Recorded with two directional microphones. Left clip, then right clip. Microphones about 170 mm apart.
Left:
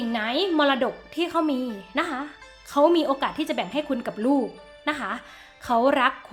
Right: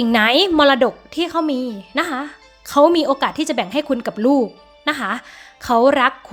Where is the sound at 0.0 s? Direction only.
45° right (ahead or behind).